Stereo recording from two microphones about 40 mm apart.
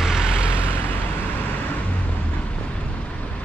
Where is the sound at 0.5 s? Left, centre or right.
Left.